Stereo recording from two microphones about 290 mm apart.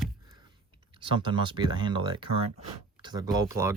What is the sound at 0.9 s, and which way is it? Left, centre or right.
Speech, centre.